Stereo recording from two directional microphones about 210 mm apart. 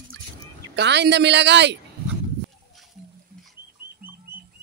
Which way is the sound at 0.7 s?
55° right (ahead or behind).